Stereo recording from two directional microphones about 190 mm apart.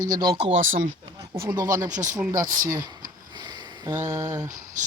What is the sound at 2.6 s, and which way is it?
Speech, 20° right (ahead or behind).